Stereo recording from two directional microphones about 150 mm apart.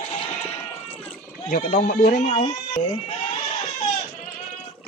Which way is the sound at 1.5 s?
65° left (ahead or behind).